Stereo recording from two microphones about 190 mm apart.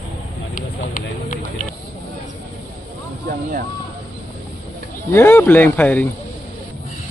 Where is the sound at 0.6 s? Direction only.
45° left (ahead or behind).